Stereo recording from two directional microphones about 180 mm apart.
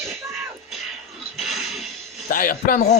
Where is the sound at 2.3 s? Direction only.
50° left (ahead or behind).